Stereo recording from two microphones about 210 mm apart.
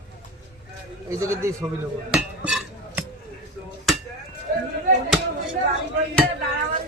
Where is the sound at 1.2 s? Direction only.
15° right (ahead or behind).